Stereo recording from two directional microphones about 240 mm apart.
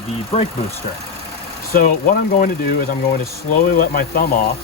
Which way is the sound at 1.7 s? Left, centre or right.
Left.